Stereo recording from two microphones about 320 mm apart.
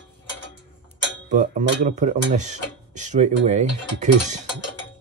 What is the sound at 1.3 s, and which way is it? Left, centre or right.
Speech, right.